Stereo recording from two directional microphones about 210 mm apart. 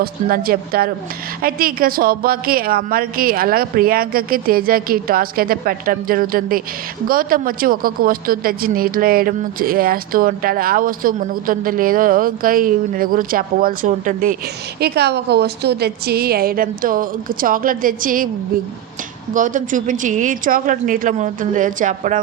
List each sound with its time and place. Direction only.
0.0 s a woman's voice: 45° right (ahead or behind)
14.8 s a woman's voice: 50° right (ahead or behind)
19.3 s a woman's voice: 40° right (ahead or behind)